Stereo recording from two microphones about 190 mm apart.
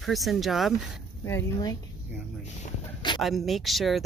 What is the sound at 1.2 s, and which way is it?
Speech, 15° left (ahead or behind).